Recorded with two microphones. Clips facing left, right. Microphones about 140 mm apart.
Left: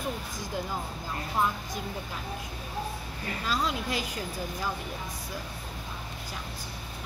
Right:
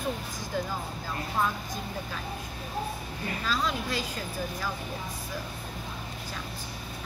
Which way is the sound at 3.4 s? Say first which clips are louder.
Left 1 dB; 20° left (ahead or behind).